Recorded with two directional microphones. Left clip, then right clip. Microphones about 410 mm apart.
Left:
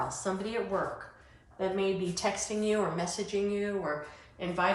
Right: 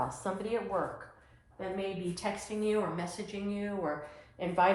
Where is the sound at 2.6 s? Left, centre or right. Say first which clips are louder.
Left 1 dB; centre.